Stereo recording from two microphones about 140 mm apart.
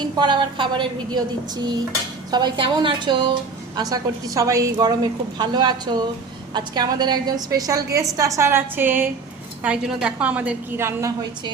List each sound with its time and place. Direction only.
0.0 s a woman's voice: 30° right (ahead or behind)